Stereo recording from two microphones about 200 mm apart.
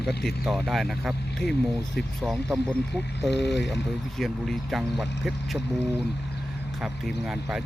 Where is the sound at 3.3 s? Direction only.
60° left (ahead or behind).